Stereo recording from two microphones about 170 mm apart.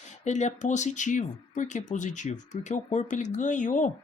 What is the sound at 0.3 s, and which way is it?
Speech, 45° left (ahead or behind).